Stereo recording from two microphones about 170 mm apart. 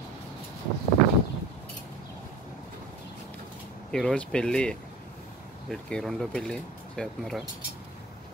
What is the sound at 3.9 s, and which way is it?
Speech, 5° left (ahead or behind).